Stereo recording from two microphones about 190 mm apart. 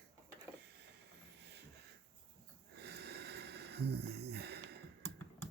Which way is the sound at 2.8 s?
60° right (ahead or behind).